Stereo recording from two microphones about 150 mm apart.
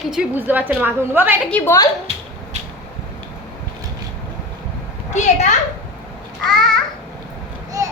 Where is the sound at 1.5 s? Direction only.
10° left (ahead or behind).